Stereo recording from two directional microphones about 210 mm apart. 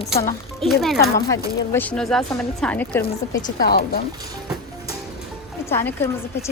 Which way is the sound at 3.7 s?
45° left (ahead or behind).